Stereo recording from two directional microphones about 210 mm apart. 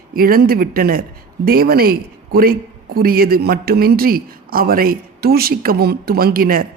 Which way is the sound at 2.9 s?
45° right (ahead or behind).